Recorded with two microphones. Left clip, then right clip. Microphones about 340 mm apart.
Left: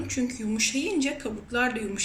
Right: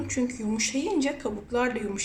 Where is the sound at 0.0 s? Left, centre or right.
Centre.